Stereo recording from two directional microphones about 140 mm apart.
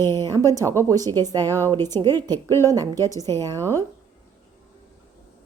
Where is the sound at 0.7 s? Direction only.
25° right (ahead or behind).